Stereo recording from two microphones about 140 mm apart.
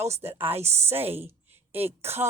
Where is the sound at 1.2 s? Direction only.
15° right (ahead or behind).